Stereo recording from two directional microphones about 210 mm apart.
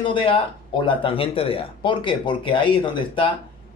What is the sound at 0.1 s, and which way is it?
A man's voice, 25° left (ahead or behind).